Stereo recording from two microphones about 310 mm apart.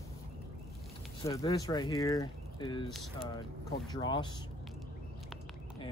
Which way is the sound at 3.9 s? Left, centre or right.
Centre.